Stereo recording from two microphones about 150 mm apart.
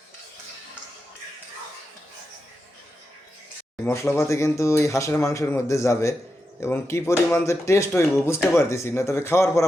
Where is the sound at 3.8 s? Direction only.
15° left (ahead or behind).